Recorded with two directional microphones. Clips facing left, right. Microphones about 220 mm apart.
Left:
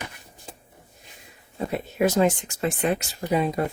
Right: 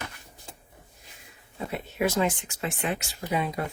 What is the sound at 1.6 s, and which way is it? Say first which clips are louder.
Speech: left 5 dB; 40° left (ahead or behind).